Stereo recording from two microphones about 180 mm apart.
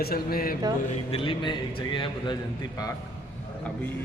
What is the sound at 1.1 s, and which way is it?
Speech, 30° left (ahead or behind).